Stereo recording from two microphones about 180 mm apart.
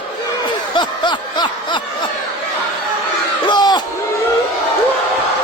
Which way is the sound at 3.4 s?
25° left (ahead or behind).